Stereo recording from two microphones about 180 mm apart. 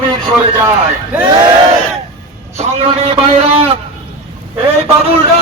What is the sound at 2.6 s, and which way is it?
A man's voice, 35° right (ahead or behind).